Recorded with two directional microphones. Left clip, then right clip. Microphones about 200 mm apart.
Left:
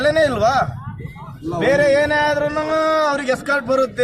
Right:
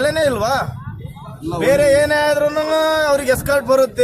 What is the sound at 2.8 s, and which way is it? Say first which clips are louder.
Speech: right 2 dB; centre (ahead or behind).